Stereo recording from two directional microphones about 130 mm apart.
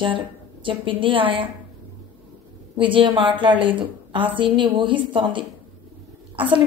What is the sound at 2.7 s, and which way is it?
A woman's voice, 40° right (ahead or behind).